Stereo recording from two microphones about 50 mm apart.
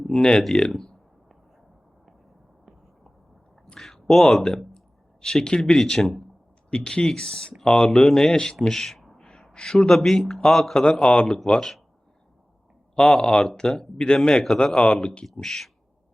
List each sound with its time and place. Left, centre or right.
0.0 s speech: centre
3.8 s speech: centre
6.7 s speech: centre
7.8 s speech: centre
13.0 s speech: centre
15.3 s speech: centre